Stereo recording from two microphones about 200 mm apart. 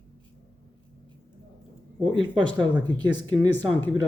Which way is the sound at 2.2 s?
25° right (ahead or behind).